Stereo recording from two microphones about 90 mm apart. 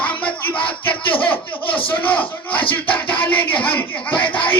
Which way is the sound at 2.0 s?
20° left (ahead or behind).